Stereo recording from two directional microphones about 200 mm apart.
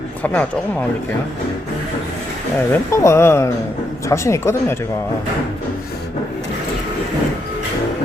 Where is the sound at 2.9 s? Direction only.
15° left (ahead or behind).